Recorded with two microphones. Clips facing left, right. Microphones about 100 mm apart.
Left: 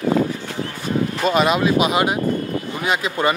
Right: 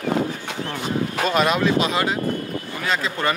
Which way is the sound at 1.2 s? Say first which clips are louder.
Left 2 dB; 5° left (ahead or behind).